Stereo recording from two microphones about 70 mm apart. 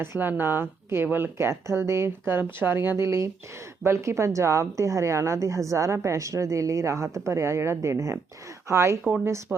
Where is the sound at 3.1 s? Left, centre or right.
Right.